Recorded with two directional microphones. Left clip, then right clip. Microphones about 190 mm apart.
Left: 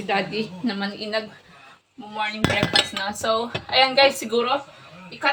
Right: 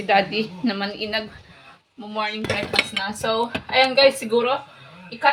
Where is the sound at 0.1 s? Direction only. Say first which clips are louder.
Right 5 dB; 30° right (ahead or behind).